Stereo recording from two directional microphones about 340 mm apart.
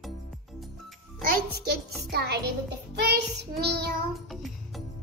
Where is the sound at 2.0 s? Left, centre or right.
Right.